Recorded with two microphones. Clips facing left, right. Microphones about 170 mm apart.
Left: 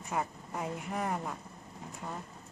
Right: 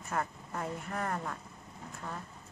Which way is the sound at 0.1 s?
10° left (ahead or behind).